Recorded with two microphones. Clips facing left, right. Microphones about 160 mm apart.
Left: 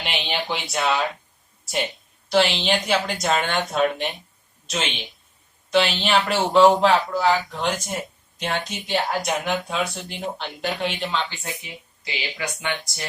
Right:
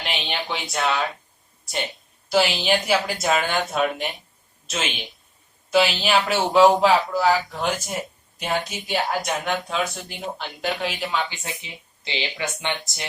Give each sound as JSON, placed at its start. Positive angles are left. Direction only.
{"t": 0.0, "sound": "speech", "side_deg": 0}
{"t": 2.3, "sound": "speech", "side_deg": -5}